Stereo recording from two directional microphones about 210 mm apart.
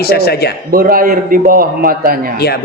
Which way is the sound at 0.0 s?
50° left (ahead or behind).